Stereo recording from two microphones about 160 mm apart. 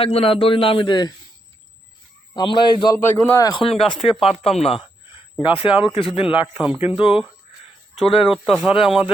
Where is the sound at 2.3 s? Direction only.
25° left (ahead or behind).